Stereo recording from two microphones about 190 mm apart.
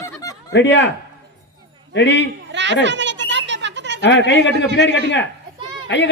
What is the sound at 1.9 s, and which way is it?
Speech, 65° left (ahead or behind).